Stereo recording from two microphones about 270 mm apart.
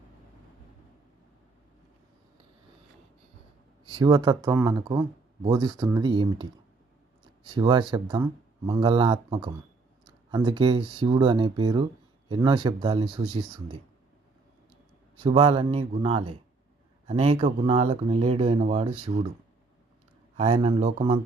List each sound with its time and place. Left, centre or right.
3.8 s speech: centre
15.2 s speech: centre
20.3 s speech: right